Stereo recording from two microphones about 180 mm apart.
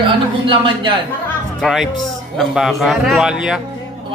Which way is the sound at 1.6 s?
Centre (ahead or behind).